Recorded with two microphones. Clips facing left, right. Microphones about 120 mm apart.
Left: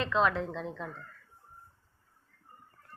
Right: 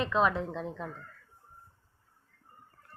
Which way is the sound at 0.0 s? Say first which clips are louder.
Even; 10° right (ahead or behind).